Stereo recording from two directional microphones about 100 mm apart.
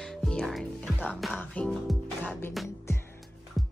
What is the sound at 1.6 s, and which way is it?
Speech, 15° left (ahead or behind).